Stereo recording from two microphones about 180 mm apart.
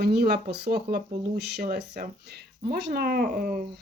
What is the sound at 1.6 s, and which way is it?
Speech, 55° right (ahead or behind).